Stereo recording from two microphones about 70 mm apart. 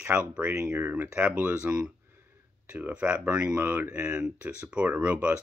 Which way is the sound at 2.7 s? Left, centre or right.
Right.